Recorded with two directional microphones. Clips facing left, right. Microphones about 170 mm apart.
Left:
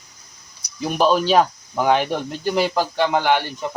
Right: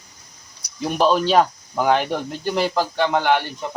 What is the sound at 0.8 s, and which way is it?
Speech, 5° left (ahead or behind).